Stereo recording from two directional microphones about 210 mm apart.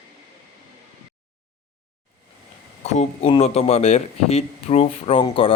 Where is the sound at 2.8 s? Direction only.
30° left (ahead or behind).